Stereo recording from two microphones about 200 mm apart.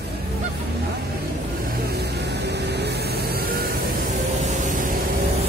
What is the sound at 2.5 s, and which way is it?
Vehicle, 55° right (ahead or behind).